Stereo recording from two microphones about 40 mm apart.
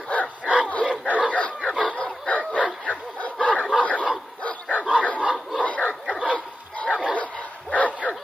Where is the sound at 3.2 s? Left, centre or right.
Left.